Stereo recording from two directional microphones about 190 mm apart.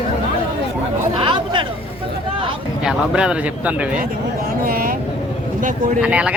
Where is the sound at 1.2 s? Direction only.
25° right (ahead or behind).